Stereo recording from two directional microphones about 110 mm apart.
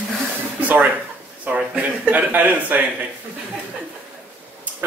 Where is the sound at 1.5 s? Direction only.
15° right (ahead or behind).